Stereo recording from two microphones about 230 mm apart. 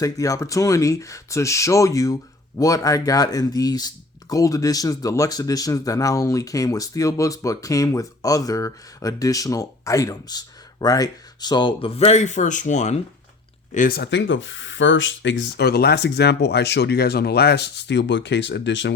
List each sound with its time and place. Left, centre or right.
0.0 s speech: centre; by 18.9 s left